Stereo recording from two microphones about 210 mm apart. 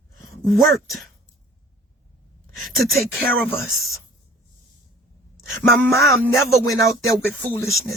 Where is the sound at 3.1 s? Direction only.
45° right (ahead or behind).